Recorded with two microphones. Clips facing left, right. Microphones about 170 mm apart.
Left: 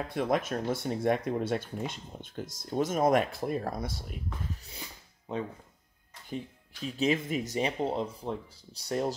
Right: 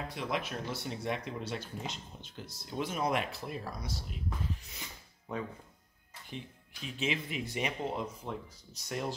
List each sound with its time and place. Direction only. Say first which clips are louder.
0.1 s speech: left 10 dB; 50° left (ahead or behind)
5.3 s speech: left 4 dB; 20° left (ahead or behind)
6.3 s speech: left 7 dB; 40° left (ahead or behind)